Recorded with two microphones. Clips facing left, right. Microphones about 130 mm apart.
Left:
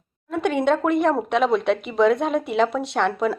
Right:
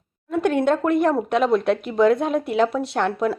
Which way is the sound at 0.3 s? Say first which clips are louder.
Right 1 dB; centre (ahead or behind).